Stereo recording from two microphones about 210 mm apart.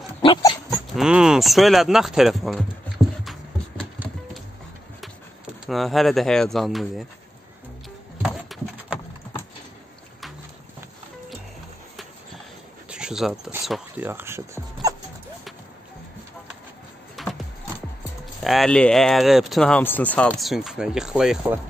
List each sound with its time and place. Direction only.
0.2 s dog: 20° left (ahead or behind)
0.7 s speech: 5° right (ahead or behind)
4.0 s clip-clop: 10° right (ahead or behind)
5.7 s speech: centre (ahead or behind)
8.2 s horse: 5° right (ahead or behind)
12.9 s speech: 5° right (ahead or behind)
17.2 s music: centre (ahead or behind)
18.4 s speech: centre (ahead or behind)